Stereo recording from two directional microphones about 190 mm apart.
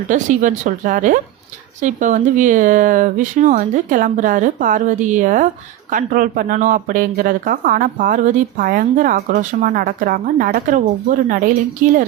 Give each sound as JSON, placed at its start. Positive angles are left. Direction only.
{"t": 0.1, "sound": "speech", "side_deg": -40}